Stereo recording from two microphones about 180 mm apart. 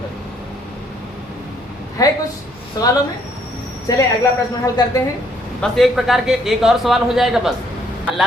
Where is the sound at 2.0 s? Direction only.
20° left (ahead or behind).